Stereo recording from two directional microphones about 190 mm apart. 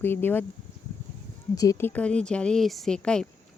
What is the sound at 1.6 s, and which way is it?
Speech, 15° left (ahead or behind).